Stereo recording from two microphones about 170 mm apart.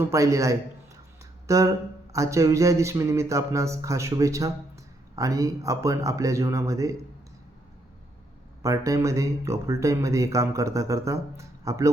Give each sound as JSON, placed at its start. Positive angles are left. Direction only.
{"t": 0.0, "sound": "speech", "side_deg": -20}
{"t": 8.6, "sound": "speech", "side_deg": -20}